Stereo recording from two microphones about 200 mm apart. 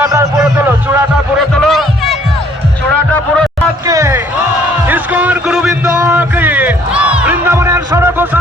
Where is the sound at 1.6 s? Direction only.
Centre (ahead or behind).